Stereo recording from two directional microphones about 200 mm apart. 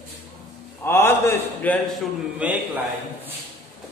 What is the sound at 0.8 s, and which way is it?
A man's voice, 10° left (ahead or behind).